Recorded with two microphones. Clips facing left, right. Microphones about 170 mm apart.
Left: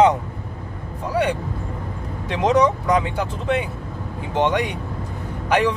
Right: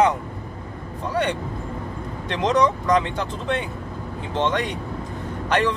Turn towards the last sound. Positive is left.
turn(degrees=10)  # may be behind; listen again after turning